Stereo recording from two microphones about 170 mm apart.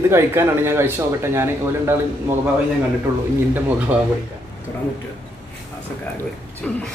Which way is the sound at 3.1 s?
15° right (ahead or behind).